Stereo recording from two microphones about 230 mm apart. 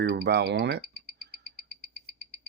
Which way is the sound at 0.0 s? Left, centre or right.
Right.